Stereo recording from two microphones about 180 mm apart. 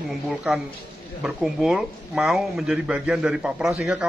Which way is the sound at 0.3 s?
Centre (ahead or behind).